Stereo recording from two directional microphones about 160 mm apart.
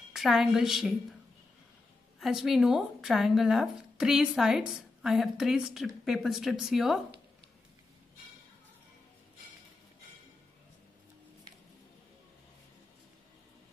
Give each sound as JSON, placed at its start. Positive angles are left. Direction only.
{"t": 0.1, "sound": "speech", "side_deg": 0}
{"t": 2.1, "sound": "speech", "side_deg": 0}